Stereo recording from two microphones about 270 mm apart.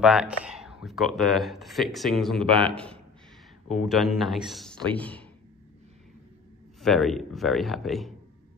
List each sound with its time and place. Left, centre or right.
0.0 s speech: centre
2.4 s speech: centre
2.7 s speech: centre
6.8 s speech: centre